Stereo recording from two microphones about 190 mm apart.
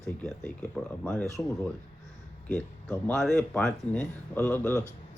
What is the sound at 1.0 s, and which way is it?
Speech, 5° left (ahead or behind).